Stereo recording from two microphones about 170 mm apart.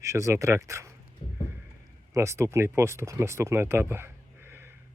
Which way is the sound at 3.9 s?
15° right (ahead or behind).